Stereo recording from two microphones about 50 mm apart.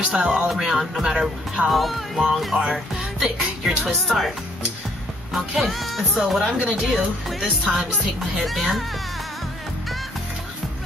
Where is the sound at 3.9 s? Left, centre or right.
Centre.